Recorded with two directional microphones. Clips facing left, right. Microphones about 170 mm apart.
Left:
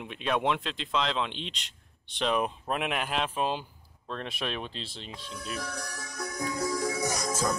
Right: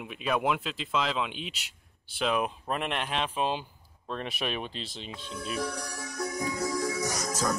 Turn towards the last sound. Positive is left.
turn(degrees=30)  # may be behind; listen again after turning